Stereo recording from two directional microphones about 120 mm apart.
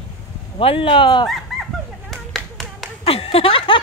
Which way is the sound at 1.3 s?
Centre (ahead or behind).